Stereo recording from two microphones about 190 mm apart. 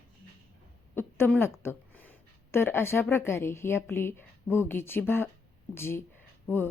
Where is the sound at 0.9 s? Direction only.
10° left (ahead or behind).